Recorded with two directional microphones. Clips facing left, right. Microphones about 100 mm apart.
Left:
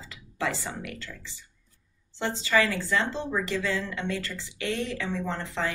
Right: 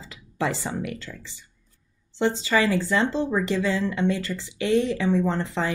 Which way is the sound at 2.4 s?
20° right (ahead or behind).